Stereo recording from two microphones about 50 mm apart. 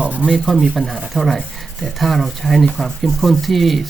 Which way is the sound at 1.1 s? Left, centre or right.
Centre.